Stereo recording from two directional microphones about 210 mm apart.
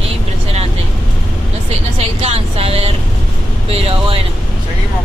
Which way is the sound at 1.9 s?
30° right (ahead or behind).